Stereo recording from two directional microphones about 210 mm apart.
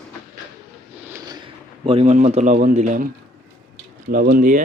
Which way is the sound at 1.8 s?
30° right (ahead or behind).